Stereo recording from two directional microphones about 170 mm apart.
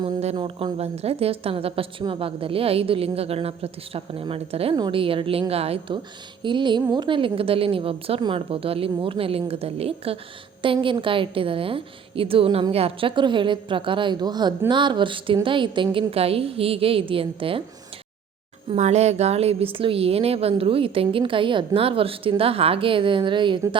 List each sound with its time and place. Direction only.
0.0 s a woman's voice: 35° right (ahead or behind)
18.7 s a woman's voice: 40° right (ahead or behind)